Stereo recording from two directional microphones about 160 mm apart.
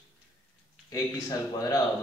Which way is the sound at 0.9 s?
20° left (ahead or behind).